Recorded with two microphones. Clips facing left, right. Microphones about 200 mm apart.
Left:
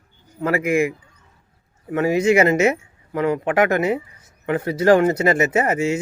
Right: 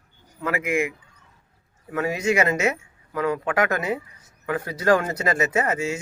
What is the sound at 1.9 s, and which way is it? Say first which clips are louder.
Speech: left 6 dB; 25° left (ahead or behind).